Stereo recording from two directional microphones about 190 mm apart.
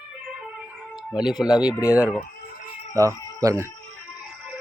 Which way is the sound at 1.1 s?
Centre (ahead or behind).